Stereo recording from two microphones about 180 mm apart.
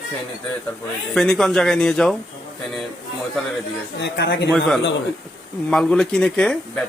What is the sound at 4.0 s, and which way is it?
Speech, 70° left (ahead or behind).